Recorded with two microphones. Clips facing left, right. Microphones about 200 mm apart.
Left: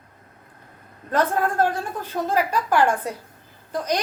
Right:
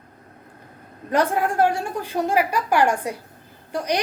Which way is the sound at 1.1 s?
15° right (ahead or behind).